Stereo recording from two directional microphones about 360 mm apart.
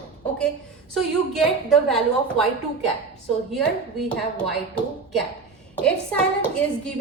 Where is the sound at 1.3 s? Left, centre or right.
Centre.